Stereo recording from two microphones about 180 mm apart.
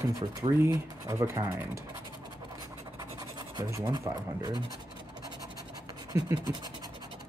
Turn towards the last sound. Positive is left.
turn(degrees=-15)  # may be behind; listen again after turning